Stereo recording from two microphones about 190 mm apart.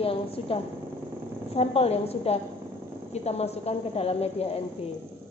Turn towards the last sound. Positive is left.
turn(degrees=35)  # may be behind; listen again after turning